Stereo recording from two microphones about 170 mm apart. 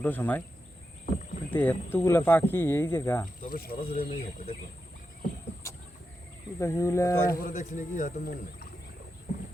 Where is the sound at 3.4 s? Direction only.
55° left (ahead or behind).